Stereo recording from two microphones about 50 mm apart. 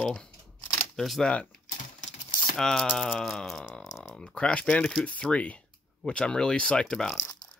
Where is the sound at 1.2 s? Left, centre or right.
Left.